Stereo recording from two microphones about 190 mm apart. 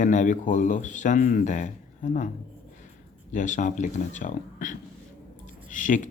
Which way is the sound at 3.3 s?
40° left (ahead or behind).